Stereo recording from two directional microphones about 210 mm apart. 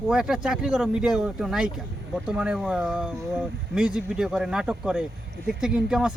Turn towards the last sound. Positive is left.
turn(degrees=-5)  # may be behind; listen again after turning